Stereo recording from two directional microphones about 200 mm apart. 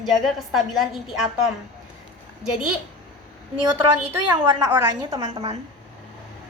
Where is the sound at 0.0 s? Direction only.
Centre (ahead or behind).